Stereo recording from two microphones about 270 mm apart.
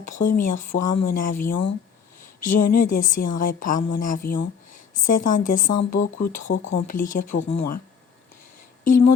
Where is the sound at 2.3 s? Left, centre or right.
Left.